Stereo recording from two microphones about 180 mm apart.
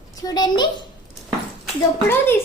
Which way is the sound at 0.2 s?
20° left (ahead or behind).